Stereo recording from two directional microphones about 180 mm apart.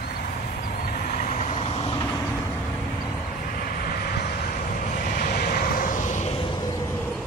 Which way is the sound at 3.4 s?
55° left (ahead or behind).